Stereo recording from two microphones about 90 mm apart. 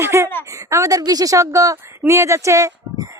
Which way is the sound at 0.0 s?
30° right (ahead or behind).